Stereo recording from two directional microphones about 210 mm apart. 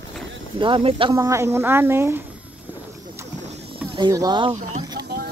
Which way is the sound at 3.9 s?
20° right (ahead or behind).